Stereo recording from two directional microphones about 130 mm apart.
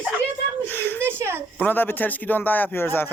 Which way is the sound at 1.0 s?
20° right (ahead or behind).